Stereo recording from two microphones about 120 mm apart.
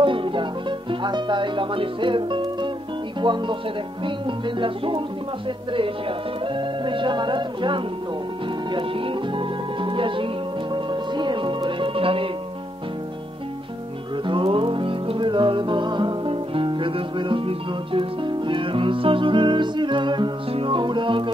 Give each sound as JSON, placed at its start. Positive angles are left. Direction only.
{"t": 0.0, "sound": "music", "side_deg": -45}
{"t": 3.2, "sound": "speech", "side_deg": -40}
{"t": 8.7, "sound": "music", "side_deg": -45}
{"t": 14.2, "sound": "music", "side_deg": -45}